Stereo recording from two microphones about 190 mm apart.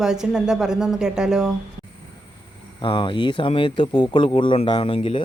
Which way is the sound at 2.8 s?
25° left (ahead or behind).